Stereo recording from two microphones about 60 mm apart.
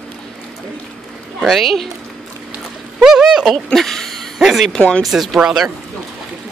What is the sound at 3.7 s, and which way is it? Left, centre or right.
Speech, centre.